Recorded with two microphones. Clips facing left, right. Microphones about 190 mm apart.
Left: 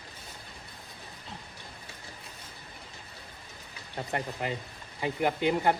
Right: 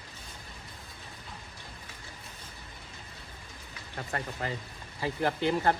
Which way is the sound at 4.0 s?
20° left (ahead or behind).